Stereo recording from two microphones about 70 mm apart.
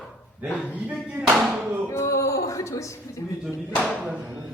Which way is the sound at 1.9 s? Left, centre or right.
Left.